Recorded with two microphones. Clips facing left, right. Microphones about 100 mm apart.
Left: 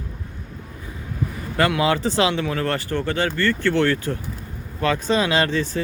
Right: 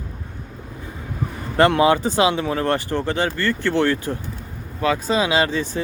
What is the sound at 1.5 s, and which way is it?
Speech, 25° right (ahead or behind).